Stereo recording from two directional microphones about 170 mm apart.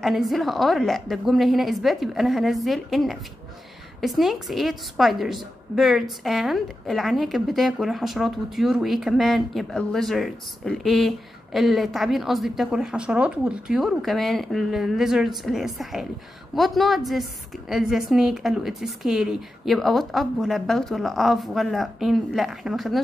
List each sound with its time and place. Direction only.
0.0 s a woman's voice: centre (ahead or behind)